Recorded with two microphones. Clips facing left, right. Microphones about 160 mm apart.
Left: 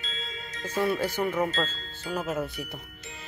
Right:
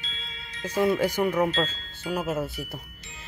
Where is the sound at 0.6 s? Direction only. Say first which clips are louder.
Right 4 dB; 15° right (ahead or behind).